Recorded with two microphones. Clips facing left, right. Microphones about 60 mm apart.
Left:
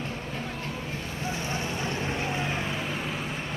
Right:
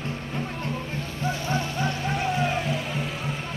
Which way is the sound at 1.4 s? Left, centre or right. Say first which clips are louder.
Right 5 dB; left.